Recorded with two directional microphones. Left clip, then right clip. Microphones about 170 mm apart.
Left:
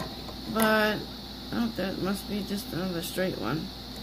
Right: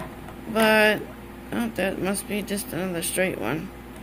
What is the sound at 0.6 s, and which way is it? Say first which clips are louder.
A woman's voice: right 6 dB; 10° right (ahead or behind).